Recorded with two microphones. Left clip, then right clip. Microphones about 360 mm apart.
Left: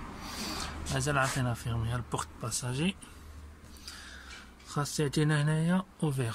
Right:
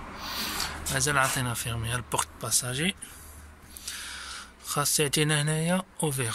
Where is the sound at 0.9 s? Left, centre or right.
Centre.